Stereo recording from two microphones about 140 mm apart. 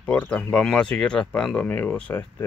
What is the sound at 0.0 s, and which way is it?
Speech, 10° left (ahead or behind).